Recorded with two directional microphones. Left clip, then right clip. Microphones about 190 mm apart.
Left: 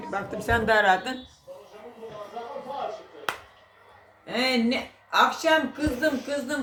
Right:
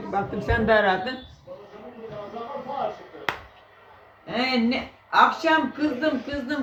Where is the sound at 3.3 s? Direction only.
Centre (ahead or behind).